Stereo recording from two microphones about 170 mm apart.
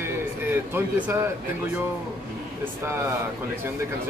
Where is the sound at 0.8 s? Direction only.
10° right (ahead or behind).